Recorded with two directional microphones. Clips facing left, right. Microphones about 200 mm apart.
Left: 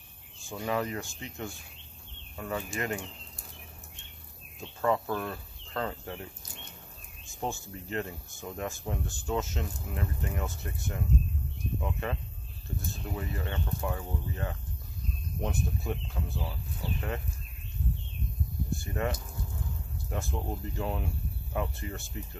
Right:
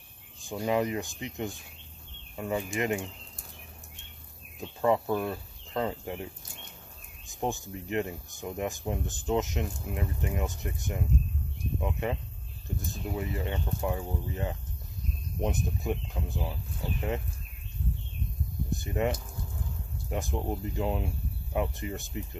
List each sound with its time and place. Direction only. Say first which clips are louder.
0.4 s speech: right 4 dB; 20° right (ahead or behind)
4.6 s speech: right 3 dB; 15° right (ahead or behind)
7.2 s speech: right 3 dB; 15° right (ahead or behind)
18.7 s a sound: right 4 dB; 20° right (ahead or behind)
20.1 s speech: right 3 dB; 15° right (ahead or behind)